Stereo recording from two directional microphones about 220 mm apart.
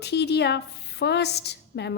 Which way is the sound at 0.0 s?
50° left (ahead or behind).